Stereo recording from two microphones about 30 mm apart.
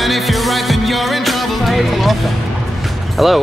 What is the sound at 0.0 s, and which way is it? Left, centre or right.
Music, centre.